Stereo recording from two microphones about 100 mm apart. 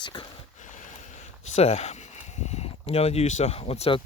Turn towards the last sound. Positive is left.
turn(degrees=70)  # may be behind; listen again after turning